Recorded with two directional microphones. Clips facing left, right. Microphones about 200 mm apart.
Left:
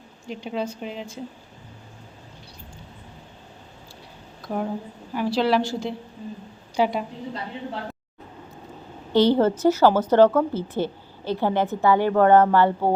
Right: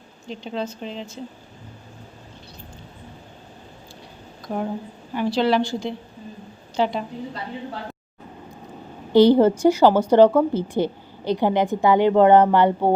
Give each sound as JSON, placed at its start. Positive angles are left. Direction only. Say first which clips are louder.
{"t": 0.3, "sound": "a woman's voice", "louder": "even", "side_deg": 10}
{"t": 4.4, "sound": "a woman's voice", "louder": "right 1 dB", "side_deg": 0}
{"t": 9.1, "sound": "a woman's voice", "louder": "right 4 dB", "side_deg": -15}